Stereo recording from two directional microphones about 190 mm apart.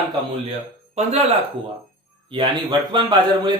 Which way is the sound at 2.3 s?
25° right (ahead or behind).